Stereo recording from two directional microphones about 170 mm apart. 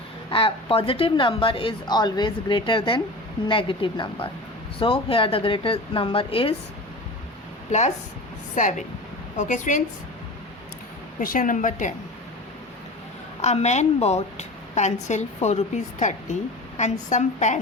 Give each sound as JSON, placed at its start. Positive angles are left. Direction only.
{"t": 0.3, "sound": "a woman's voice", "side_deg": 30}
{"t": 7.7, "sound": "a woman's voice", "side_deg": 45}
{"t": 11.2, "sound": "a woman's voice", "side_deg": 55}
{"t": 13.4, "sound": "a woman's voice", "side_deg": 40}